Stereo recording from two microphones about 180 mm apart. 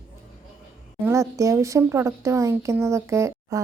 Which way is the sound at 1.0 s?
15° right (ahead or behind).